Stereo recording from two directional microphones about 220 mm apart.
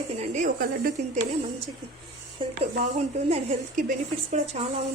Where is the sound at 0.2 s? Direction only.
35° right (ahead or behind).